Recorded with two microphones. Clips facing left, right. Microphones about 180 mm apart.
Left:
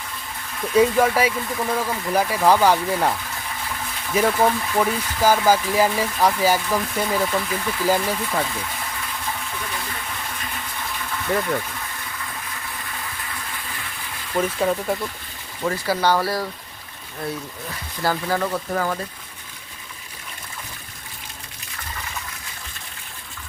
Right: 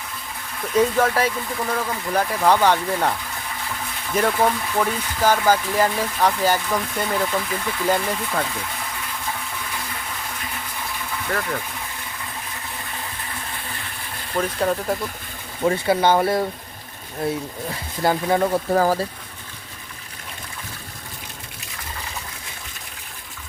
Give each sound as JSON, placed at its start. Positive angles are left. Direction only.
{"t": 0.7, "sound": "speech", "side_deg": 10}
{"t": 14.3, "sound": "speech", "side_deg": 0}
{"t": 15.6, "sound": "speech", "side_deg": -25}